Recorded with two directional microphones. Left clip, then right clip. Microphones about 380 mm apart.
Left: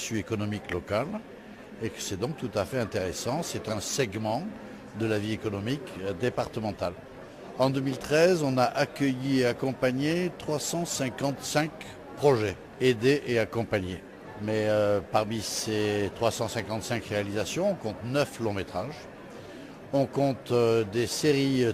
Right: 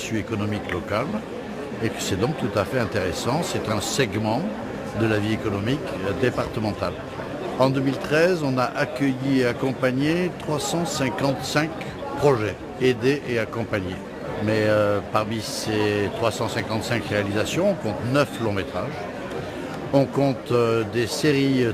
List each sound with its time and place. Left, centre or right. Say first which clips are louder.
0.1 s a man's voice: right 5 dB; left
20.0 s a man's voice: right 5 dB; centre